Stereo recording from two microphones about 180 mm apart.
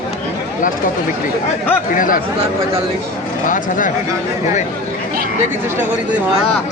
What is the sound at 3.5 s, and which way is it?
Speech, 45° left (ahead or behind).